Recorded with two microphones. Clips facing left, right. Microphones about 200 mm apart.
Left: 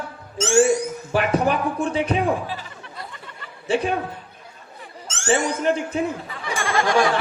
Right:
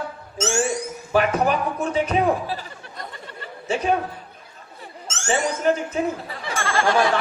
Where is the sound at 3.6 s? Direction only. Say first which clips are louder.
Left 3 dB; 30° left (ahead or behind).